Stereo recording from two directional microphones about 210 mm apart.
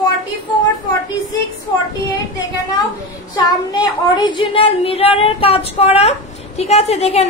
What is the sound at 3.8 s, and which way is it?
Speech, 20° left (ahead or behind).